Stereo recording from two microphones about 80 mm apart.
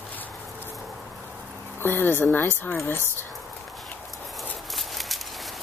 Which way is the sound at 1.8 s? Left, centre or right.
Left.